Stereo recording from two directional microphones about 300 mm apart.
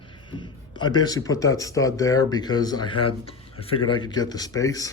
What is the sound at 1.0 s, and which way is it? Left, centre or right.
A man's voice, centre.